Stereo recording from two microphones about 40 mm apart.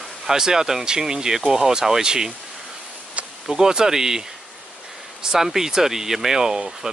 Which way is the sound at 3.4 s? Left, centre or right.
Centre.